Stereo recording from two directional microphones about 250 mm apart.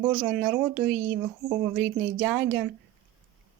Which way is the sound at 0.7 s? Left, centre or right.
Right.